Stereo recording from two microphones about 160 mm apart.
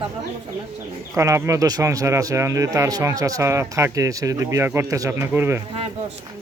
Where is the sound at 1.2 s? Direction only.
20° right (ahead or behind).